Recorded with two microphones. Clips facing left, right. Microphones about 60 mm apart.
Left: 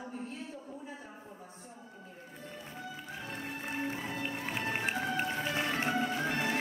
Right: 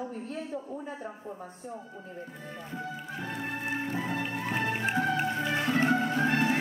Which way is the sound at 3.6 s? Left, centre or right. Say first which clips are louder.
Right 4 dB; right.